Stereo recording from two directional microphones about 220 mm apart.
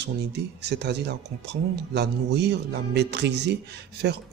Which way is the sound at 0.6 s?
50° right (ahead or behind).